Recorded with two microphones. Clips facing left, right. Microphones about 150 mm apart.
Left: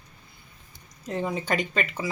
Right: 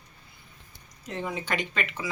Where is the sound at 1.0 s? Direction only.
35° left (ahead or behind).